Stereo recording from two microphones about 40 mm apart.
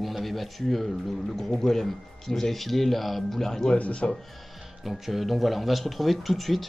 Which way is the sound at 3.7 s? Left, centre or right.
Left.